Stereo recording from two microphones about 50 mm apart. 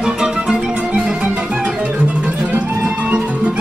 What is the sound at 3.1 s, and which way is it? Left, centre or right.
Music, right.